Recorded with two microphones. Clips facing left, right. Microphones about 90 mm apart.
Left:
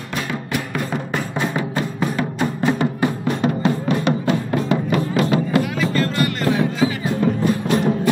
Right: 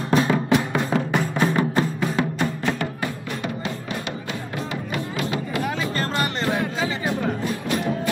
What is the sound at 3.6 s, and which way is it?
Music, 45° left (ahead or behind).